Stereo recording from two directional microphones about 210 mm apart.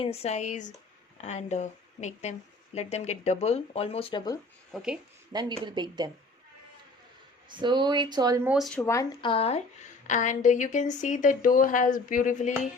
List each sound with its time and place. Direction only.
0.0 s speech: 30° left (ahead or behind)
4.7 s speech: 5° right (ahead or behind)
5.3 s speech: 20° right (ahead or behind)
7.5 s speech: 20° right (ahead or behind)
8.4 s speech: centre (ahead or behind)
8.8 s speech: 15° left (ahead or behind)
9.3 s speech: 30° left (ahead or behind)